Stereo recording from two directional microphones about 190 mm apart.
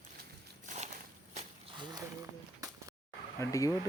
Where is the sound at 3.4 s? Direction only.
15° left (ahead or behind).